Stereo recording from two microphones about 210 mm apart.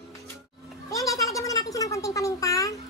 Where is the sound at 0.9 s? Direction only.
15° left (ahead or behind).